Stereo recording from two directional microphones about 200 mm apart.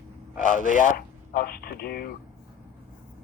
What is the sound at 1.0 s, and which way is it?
Speech, 45° left (ahead or behind).